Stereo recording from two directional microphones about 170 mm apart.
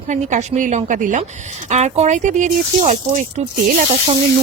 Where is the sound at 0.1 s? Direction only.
45° right (ahead or behind).